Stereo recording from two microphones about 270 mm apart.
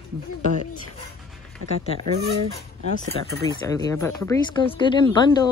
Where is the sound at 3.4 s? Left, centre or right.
Centre.